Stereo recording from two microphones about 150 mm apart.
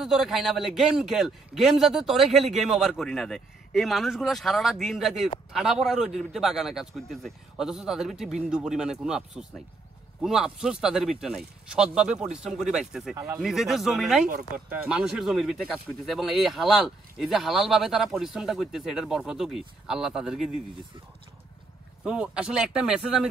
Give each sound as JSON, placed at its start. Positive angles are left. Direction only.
{"t": 0.0, "sound": "a man's voice", "side_deg": 0}
{"t": 13.1, "sound": "speech", "side_deg": -20}
{"t": 13.4, "sound": "a man's voice", "side_deg": 0}
{"t": 22.0, "sound": "a man's voice", "side_deg": -5}